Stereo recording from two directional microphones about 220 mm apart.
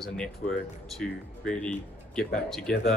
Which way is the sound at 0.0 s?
Centre (ahead or behind).